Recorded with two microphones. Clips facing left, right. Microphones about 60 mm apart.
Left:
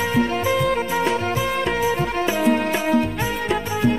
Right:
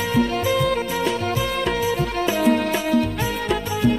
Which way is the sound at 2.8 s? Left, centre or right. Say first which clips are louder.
Left 1 dB; left.